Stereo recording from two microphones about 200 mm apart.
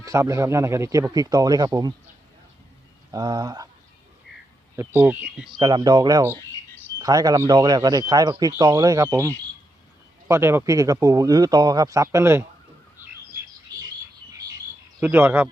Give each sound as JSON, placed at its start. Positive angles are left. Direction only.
{"t": 0.0, "sound": "speech", "side_deg": -15}
{"t": 3.1, "sound": "a man's voice", "side_deg": -20}
{"t": 4.8, "sound": "speech", "side_deg": -10}
{"t": 5.5, "sound": "a man's voice", "side_deg": -20}
{"t": 15.0, "sound": "speech", "side_deg": -10}